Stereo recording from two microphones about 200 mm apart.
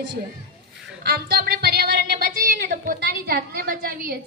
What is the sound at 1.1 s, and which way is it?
A woman's voice, 50° right (ahead or behind).